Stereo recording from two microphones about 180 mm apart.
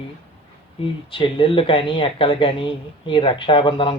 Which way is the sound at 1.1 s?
30° left (ahead or behind).